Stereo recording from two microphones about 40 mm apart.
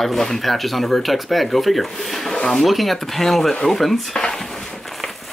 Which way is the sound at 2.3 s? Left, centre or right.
Centre.